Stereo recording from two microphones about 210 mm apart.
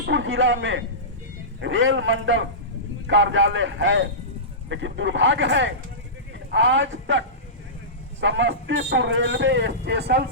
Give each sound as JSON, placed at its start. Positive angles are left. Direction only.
{"t": 0.1, "sound": "a man's voice", "side_deg": -65}